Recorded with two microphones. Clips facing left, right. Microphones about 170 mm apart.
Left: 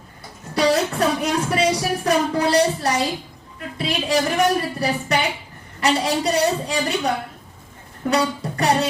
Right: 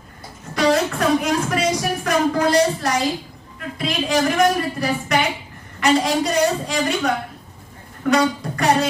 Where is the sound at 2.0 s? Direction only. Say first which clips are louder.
Right 1 dB; 35° left (ahead or behind).